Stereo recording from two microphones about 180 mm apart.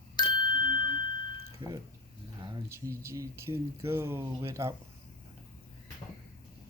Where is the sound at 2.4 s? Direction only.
25° right (ahead or behind).